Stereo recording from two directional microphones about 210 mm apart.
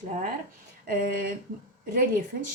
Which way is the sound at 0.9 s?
40° right (ahead or behind).